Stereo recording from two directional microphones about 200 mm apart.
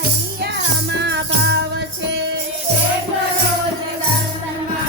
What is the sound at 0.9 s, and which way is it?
Music, 60° right (ahead or behind).